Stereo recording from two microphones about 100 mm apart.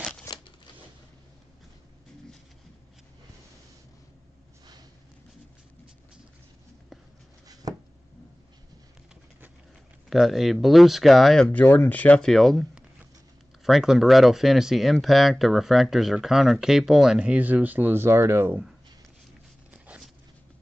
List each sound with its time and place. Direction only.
0.3 s scissors: 35° left (ahead or behind)
7.6 s a sound: 40° right (ahead or behind)
10.0 s speech: centre (ahead or behind)
11.4 s speech: 20° left (ahead or behind)
12.3 s speech: centre (ahead or behind)
13.7 s speech: centre (ahead or behind); by 18.6 s 25° right (ahead or behind)